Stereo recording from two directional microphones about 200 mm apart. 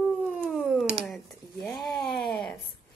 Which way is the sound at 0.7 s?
Centre (ahead or behind).